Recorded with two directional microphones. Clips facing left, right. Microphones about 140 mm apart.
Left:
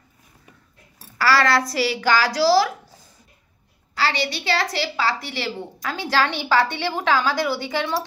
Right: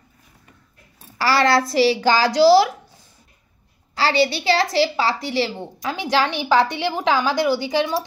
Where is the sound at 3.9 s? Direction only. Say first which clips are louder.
Right 2 dB; 30° right (ahead or behind).